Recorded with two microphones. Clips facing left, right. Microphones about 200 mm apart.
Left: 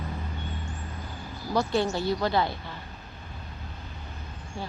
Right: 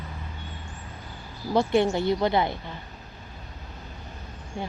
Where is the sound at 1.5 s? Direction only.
25° right (ahead or behind).